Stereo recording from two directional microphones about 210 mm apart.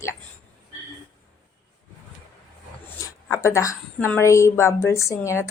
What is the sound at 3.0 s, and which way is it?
A woman's voice, 15° left (ahead or behind).